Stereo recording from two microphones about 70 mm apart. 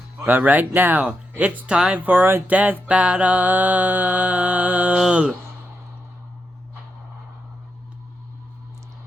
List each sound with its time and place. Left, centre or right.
0.3 s mantra: right
2.0 s mantra: right